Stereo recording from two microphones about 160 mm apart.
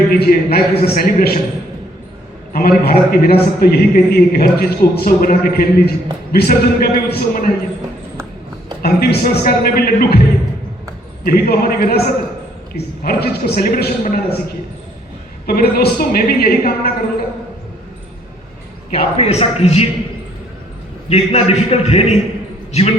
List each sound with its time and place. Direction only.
0.1 s a man's voice: 70° left (ahead or behind)
2.5 s a man's voice: 70° left (ahead or behind)
8.8 s a man's voice: 80° left
11.3 s a man's voice: 70° left (ahead or behind)
19.2 s a man's voice: 40° left (ahead or behind)
21.1 s a man's voice: 40° left (ahead or behind)